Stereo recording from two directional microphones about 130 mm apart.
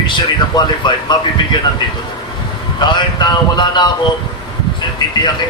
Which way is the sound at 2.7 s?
35° left (ahead or behind).